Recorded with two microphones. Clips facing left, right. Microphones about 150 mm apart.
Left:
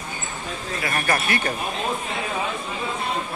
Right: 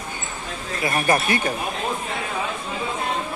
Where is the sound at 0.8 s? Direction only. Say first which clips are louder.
Right 4 dB; 20° right (ahead or behind).